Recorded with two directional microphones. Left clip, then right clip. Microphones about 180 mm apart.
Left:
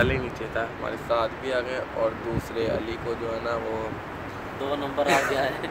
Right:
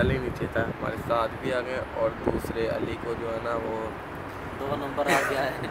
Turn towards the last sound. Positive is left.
turn(degrees=-15)  # may be behind; listen again after turning